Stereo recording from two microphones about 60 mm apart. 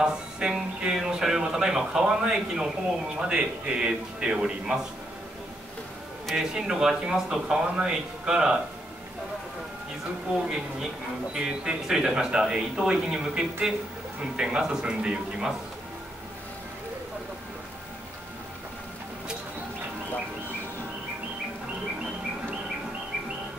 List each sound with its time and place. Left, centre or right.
0.0 s speech: centre
6.3 s speech: centre
10.3 s speech: centre